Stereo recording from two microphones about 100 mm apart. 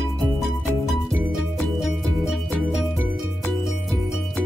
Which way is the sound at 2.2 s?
5° right (ahead or behind).